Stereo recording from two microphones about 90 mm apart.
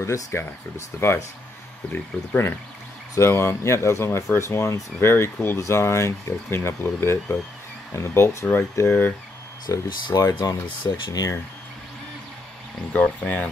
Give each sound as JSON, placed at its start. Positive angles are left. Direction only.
{"t": 0.0, "sound": "speech", "side_deg": 30}
{"t": 9.7, "sound": "speech", "side_deg": 35}
{"t": 12.9, "sound": "speech", "side_deg": 15}